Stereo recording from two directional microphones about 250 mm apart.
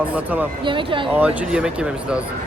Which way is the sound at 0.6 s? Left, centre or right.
Centre.